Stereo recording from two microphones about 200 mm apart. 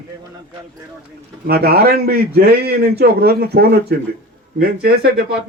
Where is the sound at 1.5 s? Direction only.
50° right (ahead or behind).